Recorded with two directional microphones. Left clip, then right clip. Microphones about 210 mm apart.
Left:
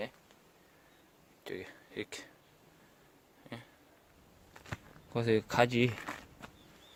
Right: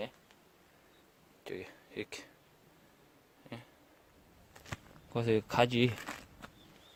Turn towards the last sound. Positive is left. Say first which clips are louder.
# left 1 dB
turn(degrees=-15)  # may be behind; listen again after turning